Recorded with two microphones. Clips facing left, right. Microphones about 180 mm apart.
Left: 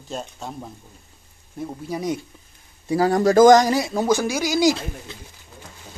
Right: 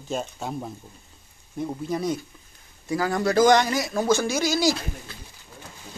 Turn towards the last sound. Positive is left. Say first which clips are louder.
# left 3 dB
turn(degrees=15)  # may be behind; listen again after turning